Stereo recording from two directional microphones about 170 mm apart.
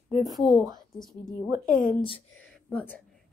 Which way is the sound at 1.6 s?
55° left (ahead or behind).